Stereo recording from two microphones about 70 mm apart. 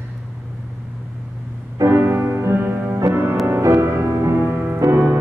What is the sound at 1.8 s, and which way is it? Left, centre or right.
Music, right.